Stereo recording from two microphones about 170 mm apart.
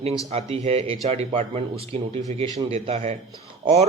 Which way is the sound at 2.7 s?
40° right (ahead or behind).